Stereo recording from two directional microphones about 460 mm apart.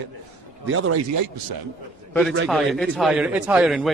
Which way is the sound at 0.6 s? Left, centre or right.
Right.